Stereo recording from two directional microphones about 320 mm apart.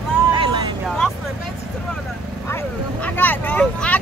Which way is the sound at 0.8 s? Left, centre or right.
Centre.